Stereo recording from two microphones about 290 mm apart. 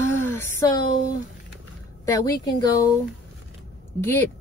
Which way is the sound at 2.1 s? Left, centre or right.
Centre.